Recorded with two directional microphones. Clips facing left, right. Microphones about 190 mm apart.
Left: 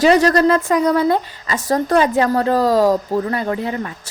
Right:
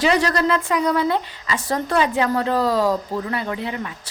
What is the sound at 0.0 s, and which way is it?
A woman's voice, 45° left (ahead or behind).